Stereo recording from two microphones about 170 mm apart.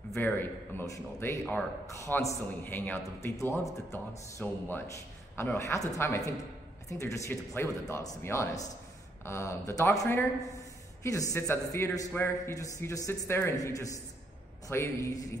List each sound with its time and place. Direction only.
0.1 s a man's voice: 10° left (ahead or behind)